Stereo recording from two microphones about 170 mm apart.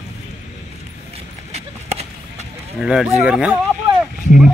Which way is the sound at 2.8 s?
5° right (ahead or behind).